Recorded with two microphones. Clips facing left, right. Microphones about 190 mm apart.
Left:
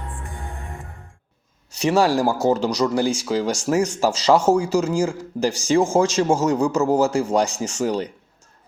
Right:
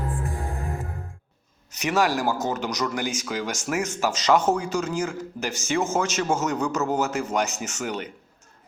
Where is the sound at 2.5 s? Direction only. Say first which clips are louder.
Left 7 dB; 30° left (ahead or behind).